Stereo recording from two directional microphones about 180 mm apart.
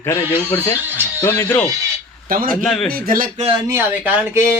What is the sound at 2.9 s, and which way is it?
Speech, 55° right (ahead or behind).